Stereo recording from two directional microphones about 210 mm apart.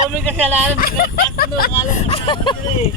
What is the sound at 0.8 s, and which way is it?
Speech, 45° left (ahead or behind).